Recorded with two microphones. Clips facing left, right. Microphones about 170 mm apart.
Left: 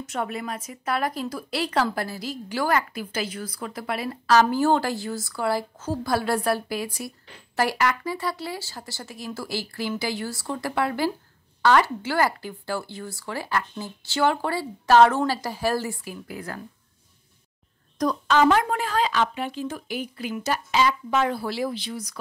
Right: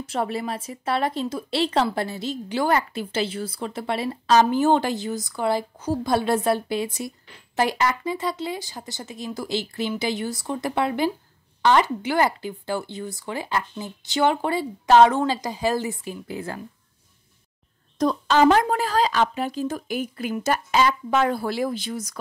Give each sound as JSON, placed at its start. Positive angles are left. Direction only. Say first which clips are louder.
{"t": 0.0, "sound": "a woman's voice", "louder": "right 3 dB", "side_deg": -30}
{"t": 17.9, "sound": "a woman's voice", "louder": "right 2 dB", "side_deg": -30}